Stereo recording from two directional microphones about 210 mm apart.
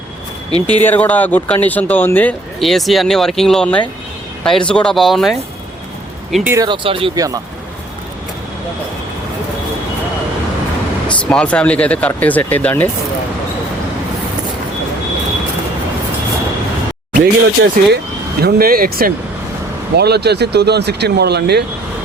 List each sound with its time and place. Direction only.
0.8 s speech: 10° left (ahead or behind); by 6.7 s 10° right (ahead or behind)
6.7 s speech: 25° right (ahead or behind)
11.1 s speech: 5° left (ahead or behind)
17.2 s speech: 45° right (ahead or behind)